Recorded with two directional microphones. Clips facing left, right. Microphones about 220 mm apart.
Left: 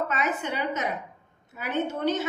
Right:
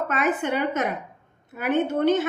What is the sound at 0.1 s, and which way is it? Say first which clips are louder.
A woman's voice: right 5 dB; 55° right (ahead or behind).